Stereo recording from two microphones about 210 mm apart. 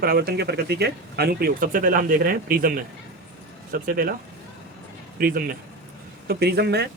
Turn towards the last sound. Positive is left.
turn(degrees=-50)  # may be behind; listen again after turning